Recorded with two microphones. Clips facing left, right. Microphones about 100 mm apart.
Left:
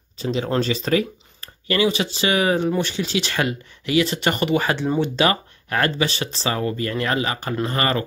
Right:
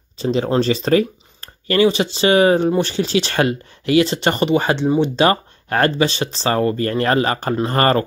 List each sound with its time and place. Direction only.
0.2 s speech: 35° right (ahead or behind)
4.8 s speech: 15° right (ahead or behind)
5.1 s speech: 35° right (ahead or behind)
6.5 s speech: 45° right (ahead or behind)